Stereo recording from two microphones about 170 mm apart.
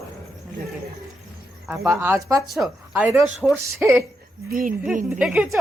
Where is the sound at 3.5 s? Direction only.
15° right (ahead or behind).